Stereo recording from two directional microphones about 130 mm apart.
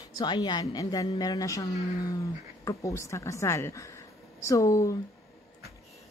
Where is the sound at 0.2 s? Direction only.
35° left (ahead or behind).